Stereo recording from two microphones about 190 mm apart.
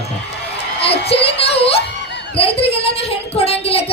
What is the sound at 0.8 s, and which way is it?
Child singing, 30° left (ahead or behind).